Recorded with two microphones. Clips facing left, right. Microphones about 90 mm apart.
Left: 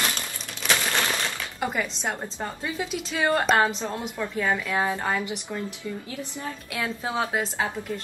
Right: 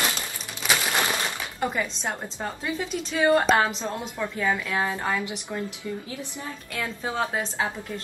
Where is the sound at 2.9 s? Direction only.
10° left (ahead or behind).